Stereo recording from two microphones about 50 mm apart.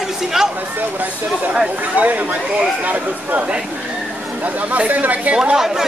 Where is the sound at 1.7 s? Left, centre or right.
Right.